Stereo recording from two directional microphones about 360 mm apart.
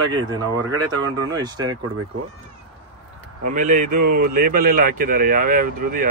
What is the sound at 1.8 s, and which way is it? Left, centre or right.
Speech, right.